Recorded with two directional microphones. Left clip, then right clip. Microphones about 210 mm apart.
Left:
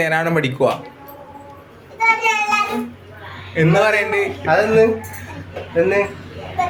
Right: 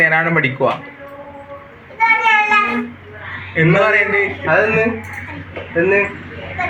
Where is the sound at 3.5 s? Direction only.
30° left (ahead or behind).